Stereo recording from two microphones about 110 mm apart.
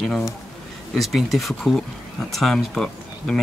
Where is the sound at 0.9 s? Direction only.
Centre (ahead or behind).